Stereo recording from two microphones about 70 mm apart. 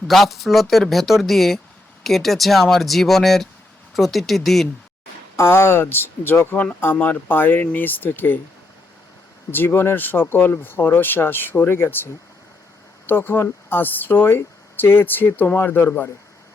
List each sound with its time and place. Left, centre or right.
0.1 s speech: centre
5.4 s speech: left
6.9 s speech: left
9.5 s speech: left
13.1 s speech: left